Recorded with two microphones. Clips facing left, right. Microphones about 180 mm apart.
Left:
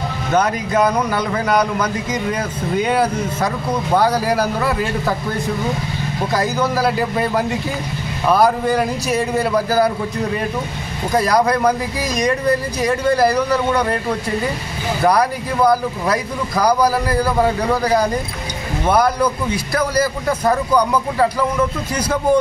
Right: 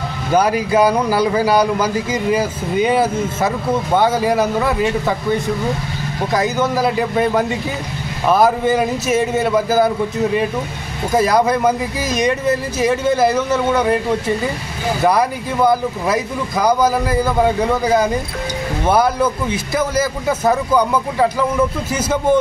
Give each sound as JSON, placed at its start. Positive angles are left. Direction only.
{"t": 0.3, "sound": "speech", "side_deg": -10}
{"t": 1.4, "sound": "a man's voice", "side_deg": -30}
{"t": 2.3, "sound": "speech", "side_deg": -5}
{"t": 15.0, "sound": "speech", "side_deg": 0}
{"t": 19.7, "sound": "speech", "side_deg": -5}